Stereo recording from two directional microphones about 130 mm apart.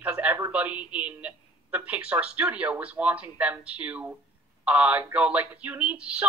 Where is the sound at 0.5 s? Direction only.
10° right (ahead or behind).